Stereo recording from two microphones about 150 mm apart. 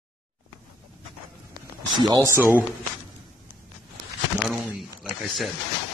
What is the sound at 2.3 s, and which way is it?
Speech, 15° right (ahead or behind).